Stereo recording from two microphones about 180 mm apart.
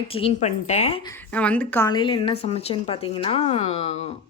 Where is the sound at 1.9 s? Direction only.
25° left (ahead or behind).